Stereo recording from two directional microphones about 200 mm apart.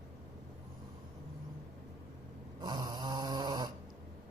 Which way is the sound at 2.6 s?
20° right (ahead or behind).